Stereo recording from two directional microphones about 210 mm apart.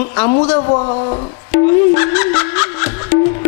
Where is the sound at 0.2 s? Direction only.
25° left (ahead or behind).